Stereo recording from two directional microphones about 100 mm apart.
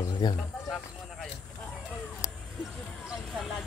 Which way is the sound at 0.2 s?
45° left (ahead or behind).